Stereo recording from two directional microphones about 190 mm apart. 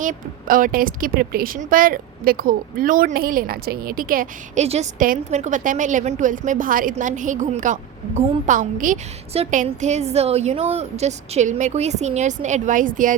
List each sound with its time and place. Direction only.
0.0 s speech: 45° right (ahead or behind)
4.6 s a woman's voice: 35° right (ahead or behind)